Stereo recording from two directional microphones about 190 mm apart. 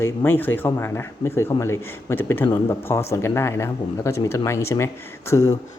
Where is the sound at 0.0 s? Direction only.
10° left (ahead or behind).